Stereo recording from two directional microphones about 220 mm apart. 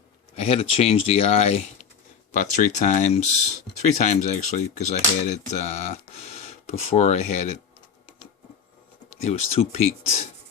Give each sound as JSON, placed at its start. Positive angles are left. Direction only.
{"t": 0.3, "sound": "speech", "side_deg": 30}
{"t": 9.0, "sound": "speech", "side_deg": 30}